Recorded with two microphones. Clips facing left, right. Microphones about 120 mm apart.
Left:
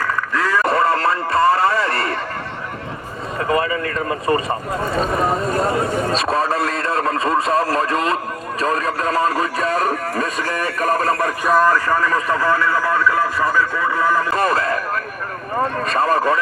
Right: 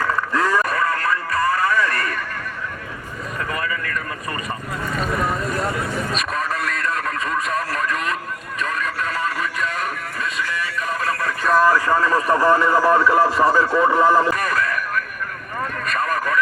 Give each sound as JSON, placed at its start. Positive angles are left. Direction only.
{"t": 0.3, "sound": "a sound", "side_deg": -15}
{"t": 0.6, "sound": "radio", "side_deg": 30}
{"t": 3.4, "sound": "speech", "side_deg": 30}
{"t": 11.1, "sound": "speech", "side_deg": 30}
{"t": 11.6, "sound": "speech", "side_deg": -15}
{"t": 14.3, "sound": "a sound", "side_deg": 30}
{"t": 15.5, "sound": "speech", "side_deg": 30}